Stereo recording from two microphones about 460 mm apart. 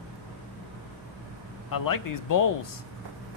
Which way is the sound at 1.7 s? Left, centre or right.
Left.